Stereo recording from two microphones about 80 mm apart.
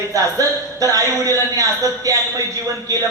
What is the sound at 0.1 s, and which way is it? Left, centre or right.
A woman's voice, right.